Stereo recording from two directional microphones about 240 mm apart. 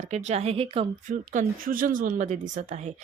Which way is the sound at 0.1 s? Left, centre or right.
Right.